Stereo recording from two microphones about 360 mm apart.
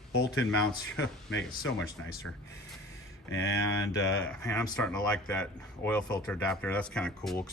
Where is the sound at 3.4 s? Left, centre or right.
Centre.